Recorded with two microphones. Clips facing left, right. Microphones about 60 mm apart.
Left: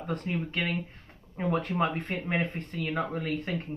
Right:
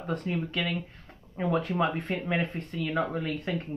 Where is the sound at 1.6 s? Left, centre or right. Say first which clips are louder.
Right 1 dB; left.